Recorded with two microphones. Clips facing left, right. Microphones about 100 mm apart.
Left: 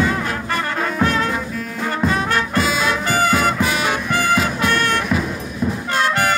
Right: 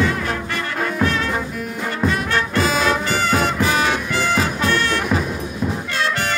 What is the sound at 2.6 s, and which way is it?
Music, 40° right (ahead or behind).